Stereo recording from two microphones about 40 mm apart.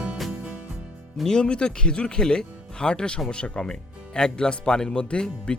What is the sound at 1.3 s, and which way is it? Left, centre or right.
Speech, left.